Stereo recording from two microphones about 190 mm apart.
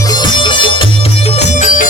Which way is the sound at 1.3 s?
40° left (ahead or behind).